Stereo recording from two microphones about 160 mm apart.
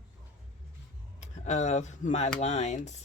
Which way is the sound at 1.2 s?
45° left (ahead or behind).